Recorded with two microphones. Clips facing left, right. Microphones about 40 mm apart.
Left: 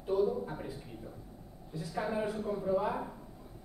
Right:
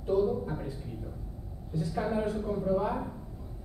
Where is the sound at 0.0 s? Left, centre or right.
Centre.